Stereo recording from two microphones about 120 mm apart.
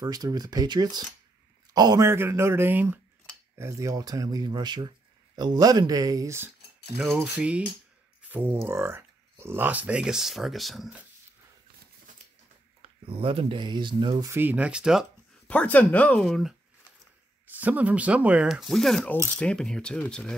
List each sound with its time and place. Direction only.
0.0 s a man's voice: 30° right (ahead or behind)
2.0 s speech: 20° right (ahead or behind)
7.2 s speech: 10° right (ahead or behind)
13.0 s speech: 50° right (ahead or behind)
14.3 s speech: 15° right (ahead or behind)
15.4 s speech: 10° left (ahead or behind)
16.3 s speech: centre (ahead or behind)
17.6 s speech: 15° right (ahead or behind); by 20.3 s 5° left (ahead or behind)